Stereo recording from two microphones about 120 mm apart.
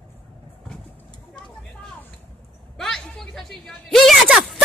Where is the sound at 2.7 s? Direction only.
5° left (ahead or behind).